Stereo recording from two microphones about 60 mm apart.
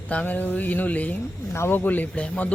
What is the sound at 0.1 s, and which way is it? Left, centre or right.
Speech, left.